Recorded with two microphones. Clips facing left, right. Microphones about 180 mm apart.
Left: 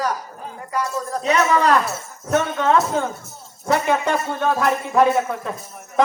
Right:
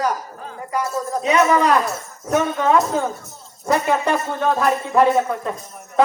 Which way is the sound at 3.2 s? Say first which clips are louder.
Right 1 dB; centre (ahead or behind).